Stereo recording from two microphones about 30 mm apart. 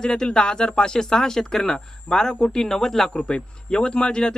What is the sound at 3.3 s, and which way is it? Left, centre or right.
Speech, left.